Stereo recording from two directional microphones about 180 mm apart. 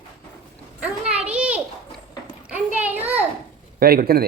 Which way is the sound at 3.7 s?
60° right (ahead or behind).